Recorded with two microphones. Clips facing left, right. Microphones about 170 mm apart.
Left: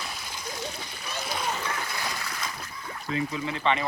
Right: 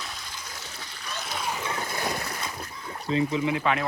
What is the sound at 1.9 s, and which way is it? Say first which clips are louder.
Boat: right 4 dB; 50° right (ahead or behind).